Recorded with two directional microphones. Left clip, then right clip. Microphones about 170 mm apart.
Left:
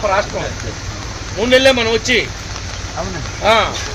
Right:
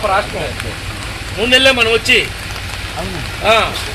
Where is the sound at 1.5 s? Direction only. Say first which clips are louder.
Right 1 dB; 35° left (ahead or behind).